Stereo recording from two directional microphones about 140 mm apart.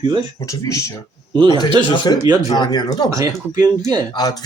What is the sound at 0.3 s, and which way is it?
Speech, 25° left (ahead or behind).